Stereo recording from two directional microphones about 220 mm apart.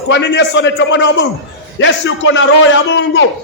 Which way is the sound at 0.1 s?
55° left (ahead or behind).